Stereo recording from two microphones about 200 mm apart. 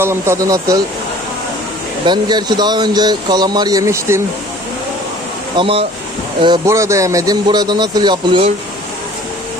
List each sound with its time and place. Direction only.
0.0 s speech: 15° right (ahead or behind)
2.0 s speech: 20° right (ahead or behind)
5.5 s speech: 25° right (ahead or behind)